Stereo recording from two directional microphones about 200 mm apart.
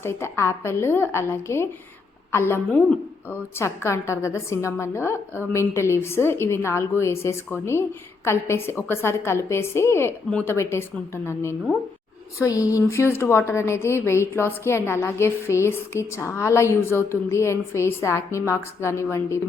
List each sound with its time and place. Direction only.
0.0 s a woman's voice: 10° left (ahead or behind)
12.4 s a woman's voice: 15° left (ahead or behind)